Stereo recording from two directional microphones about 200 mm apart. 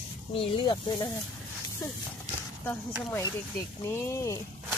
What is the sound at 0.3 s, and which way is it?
Speech, 25° left (ahead or behind).